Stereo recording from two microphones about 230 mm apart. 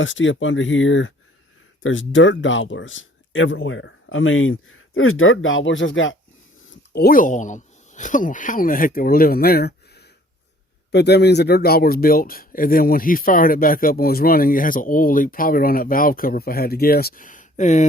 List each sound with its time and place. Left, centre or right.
0.0 s speech: left
6.9 s speech: left